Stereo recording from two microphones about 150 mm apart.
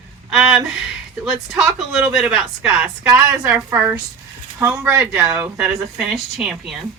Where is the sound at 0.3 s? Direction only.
5° right (ahead or behind).